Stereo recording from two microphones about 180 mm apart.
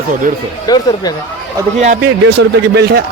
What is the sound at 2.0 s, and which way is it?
A man's voice, 70° right (ahead or behind).